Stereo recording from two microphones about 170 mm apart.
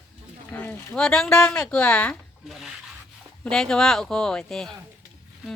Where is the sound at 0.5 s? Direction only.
10° left (ahead or behind).